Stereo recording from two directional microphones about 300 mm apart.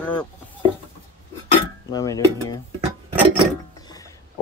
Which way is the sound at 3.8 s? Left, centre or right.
Centre.